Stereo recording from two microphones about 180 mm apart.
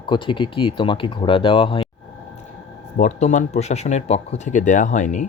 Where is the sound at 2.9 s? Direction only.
40° left (ahead or behind).